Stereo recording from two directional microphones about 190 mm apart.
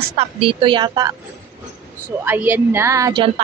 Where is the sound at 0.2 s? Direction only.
30° right (ahead or behind).